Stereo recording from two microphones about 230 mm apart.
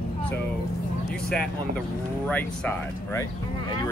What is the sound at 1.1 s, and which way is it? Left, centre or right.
Speech, centre.